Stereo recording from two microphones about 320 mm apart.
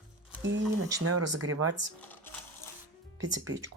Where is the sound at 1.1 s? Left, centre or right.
Right.